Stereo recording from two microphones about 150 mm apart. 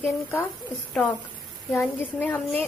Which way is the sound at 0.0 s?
15° left (ahead or behind).